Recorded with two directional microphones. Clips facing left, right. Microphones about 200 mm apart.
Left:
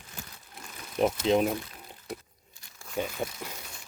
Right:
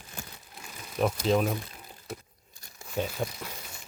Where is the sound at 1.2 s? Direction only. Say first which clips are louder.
Left 1 dB; 20° left (ahead or behind).